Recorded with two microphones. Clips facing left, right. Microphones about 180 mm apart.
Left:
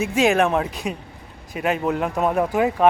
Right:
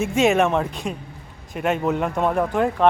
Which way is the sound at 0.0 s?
Centre (ahead or behind).